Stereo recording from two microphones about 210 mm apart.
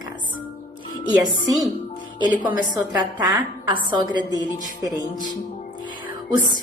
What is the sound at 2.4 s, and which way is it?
A woman's voice, 20° right (ahead or behind).